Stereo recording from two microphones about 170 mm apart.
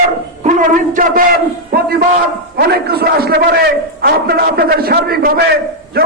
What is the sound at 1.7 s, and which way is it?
A man's voice, 65° right (ahead or behind).